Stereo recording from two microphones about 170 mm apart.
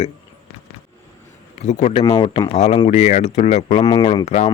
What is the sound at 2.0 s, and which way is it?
Speech, 25° left (ahead or behind).